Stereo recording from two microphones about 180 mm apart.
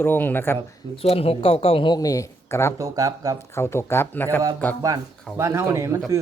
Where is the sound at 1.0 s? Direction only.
35° left (ahead or behind); by 2.7 s 15° left (ahead or behind).